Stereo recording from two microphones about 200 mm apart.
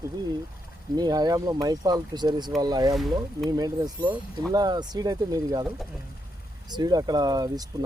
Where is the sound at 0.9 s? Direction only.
20° right (ahead or behind).